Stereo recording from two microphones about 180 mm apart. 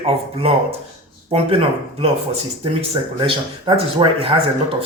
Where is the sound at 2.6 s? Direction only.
30° right (ahead or behind).